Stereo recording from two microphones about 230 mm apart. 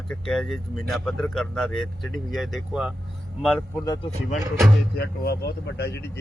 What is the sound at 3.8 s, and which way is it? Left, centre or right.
Speech, centre.